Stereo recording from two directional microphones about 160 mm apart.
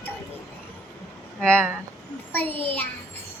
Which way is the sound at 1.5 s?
10° right (ahead or behind).